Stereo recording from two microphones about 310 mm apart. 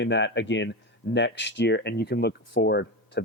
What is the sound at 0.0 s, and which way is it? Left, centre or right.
Speech, left.